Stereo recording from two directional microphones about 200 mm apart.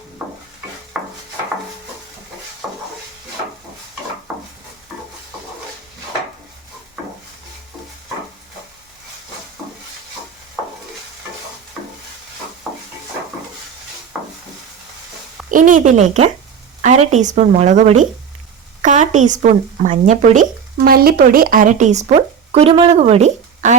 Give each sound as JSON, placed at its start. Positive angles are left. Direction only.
{"t": 0.9, "sound": "a sound", "side_deg": -5}
{"t": 14.1, "sound": "wood", "side_deg": -5}
{"t": 15.4, "sound": "speech", "side_deg": -40}